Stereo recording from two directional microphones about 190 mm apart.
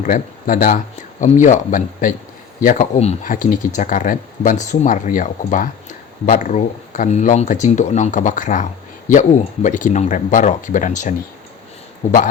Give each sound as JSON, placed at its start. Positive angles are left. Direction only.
{"t": 0.0, "sound": "speech", "side_deg": 45}
{"t": 9.6, "sound": "speech", "side_deg": 40}